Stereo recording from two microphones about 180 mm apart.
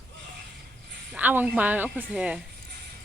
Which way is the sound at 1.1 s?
10° right (ahead or behind).